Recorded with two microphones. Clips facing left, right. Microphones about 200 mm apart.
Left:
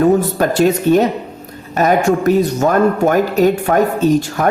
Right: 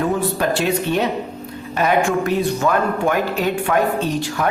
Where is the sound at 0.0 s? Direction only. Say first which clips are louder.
Left 7 dB; 45° left (ahead or behind).